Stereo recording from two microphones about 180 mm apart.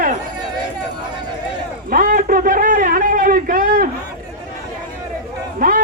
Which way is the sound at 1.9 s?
50° right (ahead or behind).